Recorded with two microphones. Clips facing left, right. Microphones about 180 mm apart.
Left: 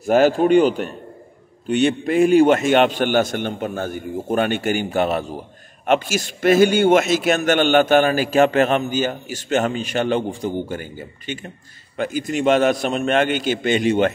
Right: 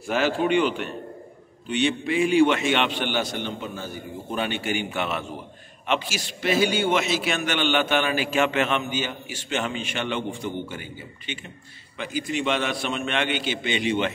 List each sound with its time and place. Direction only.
0.0 s a man's voice: 45° left (ahead or behind)